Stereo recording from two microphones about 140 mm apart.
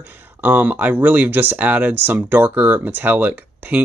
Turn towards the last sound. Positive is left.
turn(degrees=-10)  # may be behind; listen again after turning